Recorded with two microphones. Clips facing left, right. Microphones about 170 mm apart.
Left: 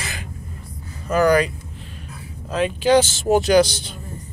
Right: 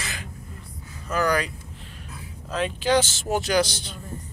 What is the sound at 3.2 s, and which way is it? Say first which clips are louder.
Speech: left 8 dB; 25° left (ahead or behind).